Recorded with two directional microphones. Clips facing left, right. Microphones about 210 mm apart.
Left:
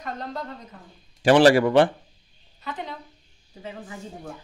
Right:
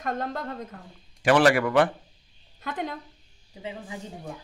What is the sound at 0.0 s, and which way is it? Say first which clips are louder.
Speech: right 3 dB; 50° right (ahead or behind).